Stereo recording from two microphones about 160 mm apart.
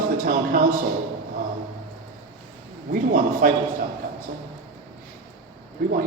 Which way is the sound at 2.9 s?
60° right (ahead or behind).